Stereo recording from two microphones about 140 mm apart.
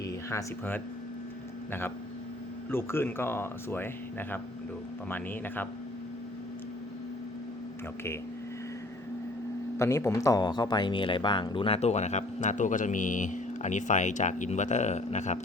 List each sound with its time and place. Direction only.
0.3 s speech: 15° left (ahead or behind)
2.6 s speech: 15° left (ahead or behind)
5.0 s speech: 15° left (ahead or behind)
9.7 s speech: 20° left (ahead or behind); by 15.4 s 55° left (ahead or behind)